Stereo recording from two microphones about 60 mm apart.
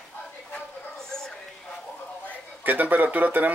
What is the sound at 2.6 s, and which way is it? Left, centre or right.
Speech, right.